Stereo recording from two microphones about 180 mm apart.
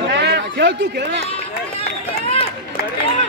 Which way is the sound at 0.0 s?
70° right (ahead or behind).